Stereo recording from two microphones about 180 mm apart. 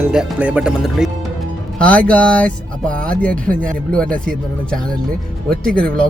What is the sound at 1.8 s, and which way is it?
Speech, 5° left (ahead or behind).